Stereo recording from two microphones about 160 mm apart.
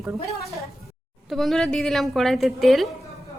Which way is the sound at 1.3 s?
Centre (ahead or behind).